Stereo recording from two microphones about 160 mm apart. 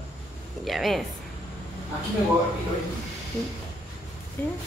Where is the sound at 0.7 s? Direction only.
Centre (ahead or behind).